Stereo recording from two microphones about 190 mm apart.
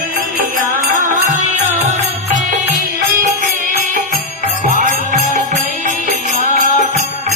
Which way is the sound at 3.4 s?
45° right (ahead or behind).